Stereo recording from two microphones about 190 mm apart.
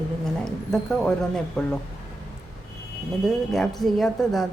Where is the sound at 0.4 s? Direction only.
5° left (ahead or behind).